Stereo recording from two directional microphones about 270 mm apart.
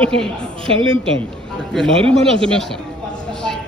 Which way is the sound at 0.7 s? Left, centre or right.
Centre.